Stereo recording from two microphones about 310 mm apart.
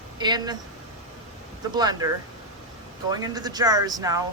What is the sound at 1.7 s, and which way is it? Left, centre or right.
Speech, centre.